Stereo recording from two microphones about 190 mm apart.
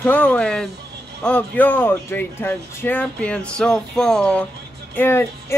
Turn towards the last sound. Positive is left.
turn(degrees=10)  # may be behind; listen again after turning